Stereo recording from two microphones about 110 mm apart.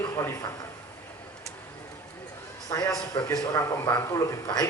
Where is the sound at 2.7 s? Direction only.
35° left (ahead or behind).